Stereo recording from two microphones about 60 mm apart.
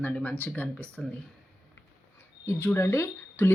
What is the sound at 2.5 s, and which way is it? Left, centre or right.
Speech, left.